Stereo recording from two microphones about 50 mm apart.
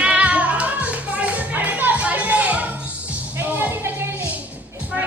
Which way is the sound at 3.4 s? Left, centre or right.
Right.